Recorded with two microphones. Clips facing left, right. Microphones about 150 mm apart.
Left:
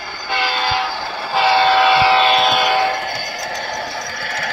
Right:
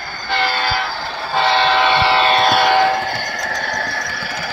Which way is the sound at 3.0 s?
10° left (ahead or behind).